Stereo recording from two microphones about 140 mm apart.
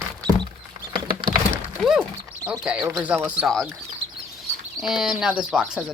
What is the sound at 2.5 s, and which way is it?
Speech, 5° right (ahead or behind).